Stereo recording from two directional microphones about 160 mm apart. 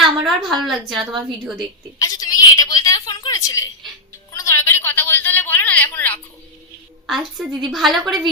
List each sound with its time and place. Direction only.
0.2 s a woman's voice: centre (ahead or behind)
2.0 s a sound: 20° left (ahead or behind)
7.1 s a woman's voice: centre (ahead or behind)